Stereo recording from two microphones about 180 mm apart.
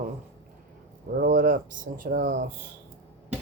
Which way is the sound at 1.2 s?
45° right (ahead or behind).